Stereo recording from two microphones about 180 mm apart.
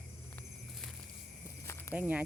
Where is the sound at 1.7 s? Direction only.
15° left (ahead or behind).